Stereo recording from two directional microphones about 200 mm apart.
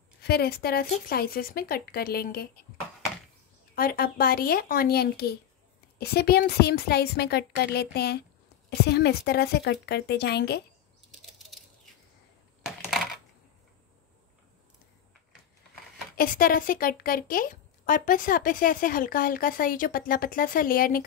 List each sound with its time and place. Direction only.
0.2 s a woman's voice: 50° left (ahead or behind)
3.7 s a woman's voice: 45° left (ahead or behind)
11.3 s a sound: centre (ahead or behind)
16.2 s a woman's voice: 45° left (ahead or behind)